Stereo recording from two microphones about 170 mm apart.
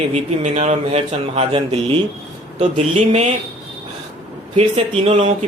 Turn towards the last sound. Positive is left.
turn(degrees=-40)  # may be behind; listen again after turning